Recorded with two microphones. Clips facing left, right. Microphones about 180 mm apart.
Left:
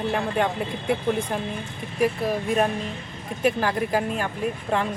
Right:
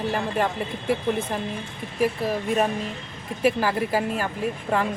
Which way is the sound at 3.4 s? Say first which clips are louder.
Right 1 dB; 5° right (ahead or behind).